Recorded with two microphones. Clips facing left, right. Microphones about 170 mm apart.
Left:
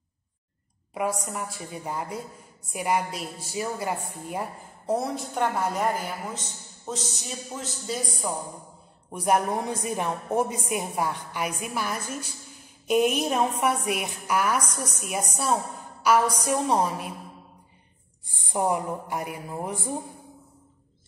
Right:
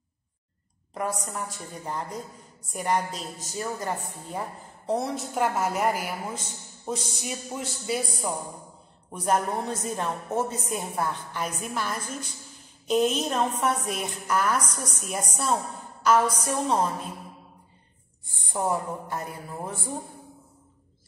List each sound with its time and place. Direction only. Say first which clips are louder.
0.9 s a woman's voice: left 2 dB; 10° left (ahead or behind); by 8.3 s 10° right (ahead or behind)
9.1 s a woman's voice: left 2 dB; 10° left (ahead or behind)
18.2 s a woman's voice: left 2 dB; 15° left (ahead or behind)